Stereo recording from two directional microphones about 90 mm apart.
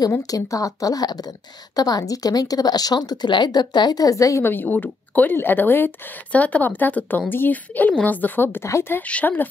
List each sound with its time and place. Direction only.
0.2 s speech: 40° left (ahead or behind)
4.5 s speech: 20° left (ahead or behind)
9.0 s speech: 15° left (ahead or behind)